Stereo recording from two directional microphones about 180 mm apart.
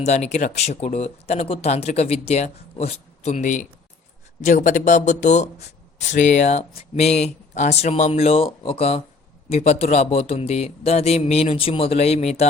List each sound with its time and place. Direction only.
0.0 s speech: 40° left (ahead or behind)